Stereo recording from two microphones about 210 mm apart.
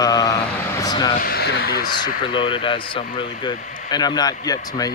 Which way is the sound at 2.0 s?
25° left (ahead or behind).